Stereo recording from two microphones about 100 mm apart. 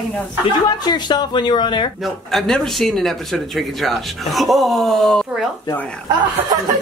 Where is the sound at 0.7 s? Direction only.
45° left (ahead or behind).